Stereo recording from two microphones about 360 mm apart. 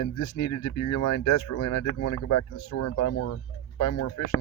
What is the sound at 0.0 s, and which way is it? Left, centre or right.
Speech, left.